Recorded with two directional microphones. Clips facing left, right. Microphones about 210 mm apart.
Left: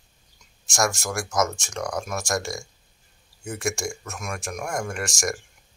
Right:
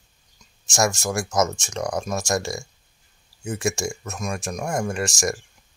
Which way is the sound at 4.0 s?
20° right (ahead or behind).